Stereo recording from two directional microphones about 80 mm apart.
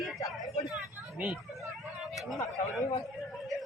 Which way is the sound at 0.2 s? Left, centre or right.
Left.